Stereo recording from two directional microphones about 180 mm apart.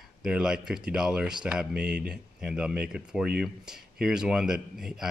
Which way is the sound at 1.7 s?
60° right (ahead or behind).